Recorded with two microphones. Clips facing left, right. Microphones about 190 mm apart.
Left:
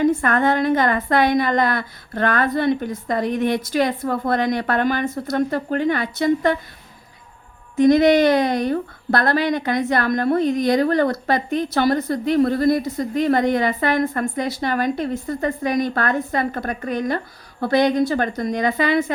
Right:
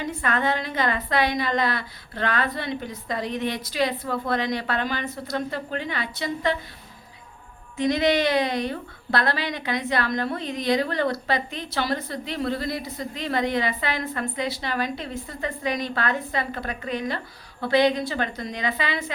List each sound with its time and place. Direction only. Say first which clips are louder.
0.0 s a woman's voice: left 8 dB; 50° left (ahead or behind)
7.8 s a woman's voice: left 8 dB; 45° left (ahead or behind)